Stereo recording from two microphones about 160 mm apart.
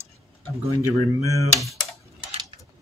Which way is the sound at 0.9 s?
20° left (ahead or behind).